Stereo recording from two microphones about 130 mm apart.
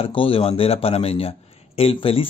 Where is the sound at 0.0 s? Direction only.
45° left (ahead or behind).